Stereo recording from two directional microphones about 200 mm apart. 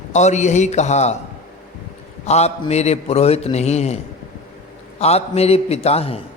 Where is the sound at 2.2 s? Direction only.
35° left (ahead or behind).